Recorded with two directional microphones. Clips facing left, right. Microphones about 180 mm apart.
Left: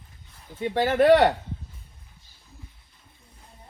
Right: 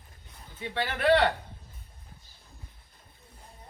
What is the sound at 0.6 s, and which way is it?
Speech, 45° left (ahead or behind).